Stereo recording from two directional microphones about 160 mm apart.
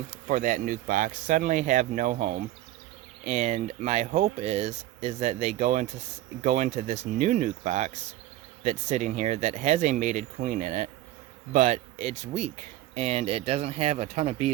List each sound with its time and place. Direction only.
0.3 s speech: 55° right (ahead or behind)